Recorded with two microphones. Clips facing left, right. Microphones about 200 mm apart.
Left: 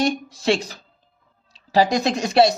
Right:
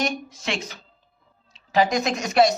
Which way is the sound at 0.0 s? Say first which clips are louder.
Left 6 dB; 35° left (ahead or behind).